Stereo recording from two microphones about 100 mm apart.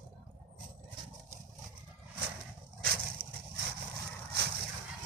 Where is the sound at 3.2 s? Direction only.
60° right (ahead or behind).